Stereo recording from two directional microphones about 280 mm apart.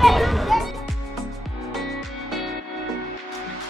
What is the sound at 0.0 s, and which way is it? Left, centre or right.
Music, centre.